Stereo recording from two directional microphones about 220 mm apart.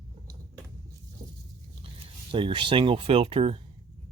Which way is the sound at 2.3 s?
20° right (ahead or behind).